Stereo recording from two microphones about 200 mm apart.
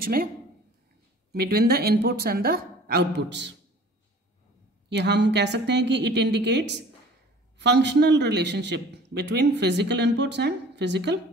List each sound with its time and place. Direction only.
0.0 s speech: 50° right (ahead or behind)
1.3 s a woman's voice: 50° right (ahead or behind)
4.8 s a man's voice: 60° right (ahead or behind)